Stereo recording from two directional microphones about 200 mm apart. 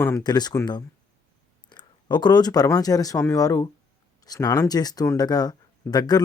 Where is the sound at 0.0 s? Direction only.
15° left (ahead or behind).